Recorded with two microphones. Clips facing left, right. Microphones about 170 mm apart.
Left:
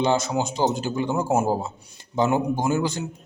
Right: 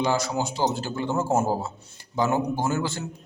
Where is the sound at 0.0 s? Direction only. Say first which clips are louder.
Left 3 dB; 20° left (ahead or behind).